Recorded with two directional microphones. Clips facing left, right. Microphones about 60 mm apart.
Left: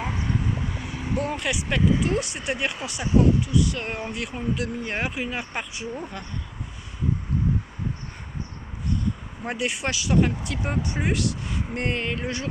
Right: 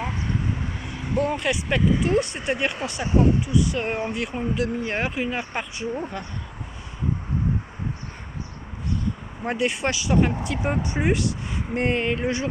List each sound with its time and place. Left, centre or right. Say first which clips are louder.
0.7 s vehicle: even; centre
1.1 s speech: right 4 dB; centre
3.1 s speech: left 1 dB; right
3.5 s speech: right 2 dB; centre
9.4 s speech: right 5 dB; centre